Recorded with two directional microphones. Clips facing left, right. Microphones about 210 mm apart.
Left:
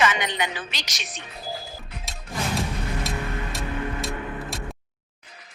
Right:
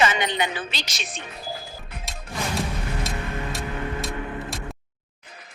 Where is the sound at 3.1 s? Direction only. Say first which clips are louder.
Left 1 dB; centre (ahead or behind).